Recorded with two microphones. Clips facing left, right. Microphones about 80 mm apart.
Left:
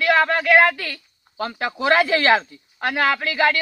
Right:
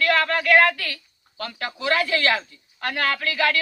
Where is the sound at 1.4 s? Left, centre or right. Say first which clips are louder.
Left 6 dB; left.